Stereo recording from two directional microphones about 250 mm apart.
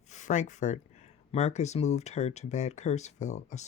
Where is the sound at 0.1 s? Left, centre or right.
Left.